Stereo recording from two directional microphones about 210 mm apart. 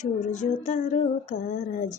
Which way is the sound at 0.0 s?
35° left (ahead or behind).